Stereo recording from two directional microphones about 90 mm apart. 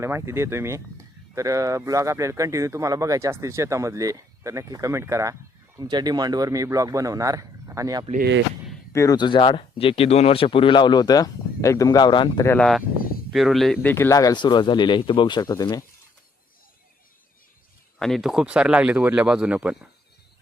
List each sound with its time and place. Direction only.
0.0 s speech: 30° right (ahead or behind)
5.8 s speech: 50° right (ahead or behind)
8.9 s speech: 35° left (ahead or behind)
9.1 s speech: 60° left (ahead or behind)
12.5 s speech: 5° left (ahead or behind)
13.8 s speech: 25° left (ahead or behind)
14.1 s speech: 40° left (ahead or behind)
14.3 s speech: 60° left (ahead or behind)
15.4 s speech: 45° left (ahead or behind)
18.0 s speech: centre (ahead or behind)